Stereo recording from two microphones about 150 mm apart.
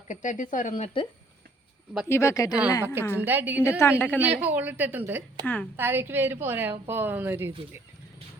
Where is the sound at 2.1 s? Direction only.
20° left (ahead or behind).